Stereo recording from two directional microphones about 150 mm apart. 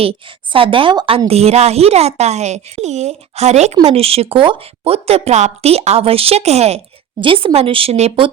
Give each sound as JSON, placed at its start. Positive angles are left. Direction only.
{"t": 0.0, "sound": "a woman's voice", "side_deg": -35}